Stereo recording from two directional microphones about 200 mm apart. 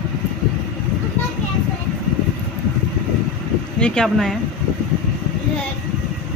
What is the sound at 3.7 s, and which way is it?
Speech, 5° left (ahead or behind).